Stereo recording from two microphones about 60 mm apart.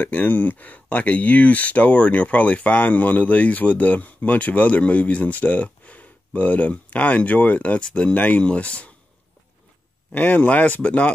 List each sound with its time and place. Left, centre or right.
0.0 s speech: left
10.1 s speech: left